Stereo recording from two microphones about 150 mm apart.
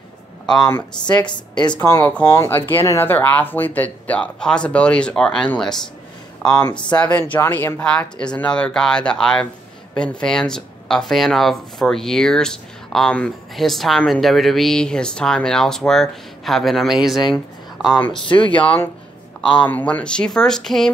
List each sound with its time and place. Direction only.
1.0 s a woman's voice: 30° left (ahead or behind)
1.8 s speech: 15° left (ahead or behind); by 17.2 s centre (ahead or behind)
18.3 s speech: 35° left (ahead or behind)
18.6 s speech: 10° left (ahead or behind)